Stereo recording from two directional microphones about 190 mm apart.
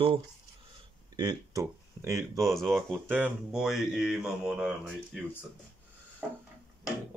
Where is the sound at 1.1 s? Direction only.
20° right (ahead or behind).